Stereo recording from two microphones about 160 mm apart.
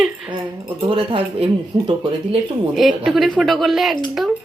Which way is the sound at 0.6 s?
35° right (ahead or behind).